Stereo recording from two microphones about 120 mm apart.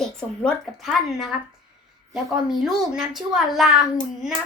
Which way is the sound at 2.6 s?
Centre (ahead or behind).